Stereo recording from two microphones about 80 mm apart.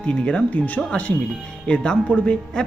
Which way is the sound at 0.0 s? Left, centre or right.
Centre.